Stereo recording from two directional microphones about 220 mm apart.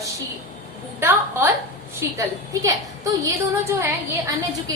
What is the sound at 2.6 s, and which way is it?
A woman's voice, 15° right (ahead or behind).